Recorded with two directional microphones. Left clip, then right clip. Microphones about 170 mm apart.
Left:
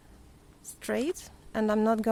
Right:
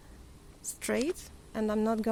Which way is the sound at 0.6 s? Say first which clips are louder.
Even; centre (ahead or behind).